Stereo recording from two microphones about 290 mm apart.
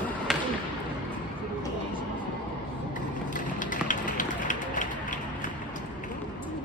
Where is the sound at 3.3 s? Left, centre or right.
Left.